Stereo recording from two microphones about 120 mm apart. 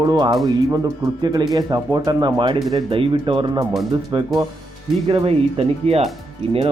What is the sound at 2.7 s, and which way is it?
Speech, 50° right (ahead or behind).